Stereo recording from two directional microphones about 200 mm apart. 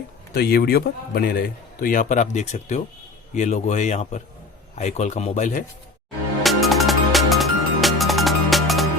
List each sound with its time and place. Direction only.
0.3 s speech: 50° left (ahead or behind)
6.4 s music: centre (ahead or behind)